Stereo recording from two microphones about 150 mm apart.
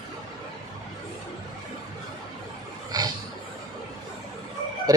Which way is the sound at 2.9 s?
25° right (ahead or behind).